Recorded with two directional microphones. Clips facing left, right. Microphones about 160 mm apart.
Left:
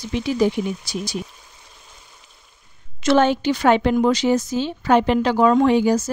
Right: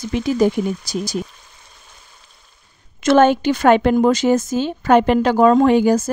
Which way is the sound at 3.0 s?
50° right (ahead or behind).